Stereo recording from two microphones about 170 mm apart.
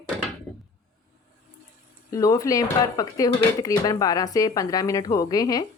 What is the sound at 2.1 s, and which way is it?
A woman's voice, 20° left (ahead or behind).